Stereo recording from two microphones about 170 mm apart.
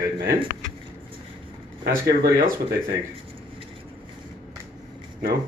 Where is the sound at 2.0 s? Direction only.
70° right (ahead or behind).